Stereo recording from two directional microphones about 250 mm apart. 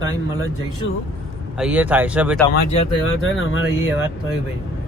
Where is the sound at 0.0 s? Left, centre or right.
Left.